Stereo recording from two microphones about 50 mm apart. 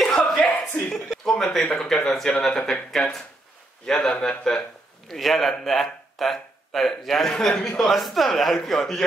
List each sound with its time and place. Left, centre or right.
0.4 s a sound: left
1.2 s speech: centre
5.0 s speech: centre